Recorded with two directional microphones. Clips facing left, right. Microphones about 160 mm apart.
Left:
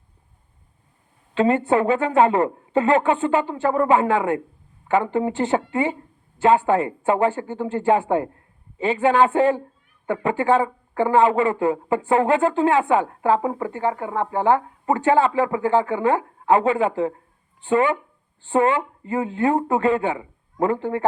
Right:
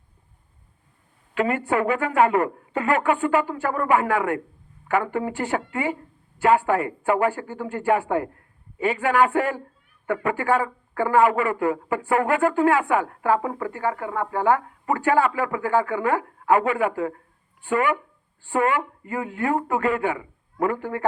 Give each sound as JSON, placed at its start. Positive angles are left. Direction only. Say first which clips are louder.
{"t": 1.3, "sound": "speech", "louder": "left 5 dB", "side_deg": 25}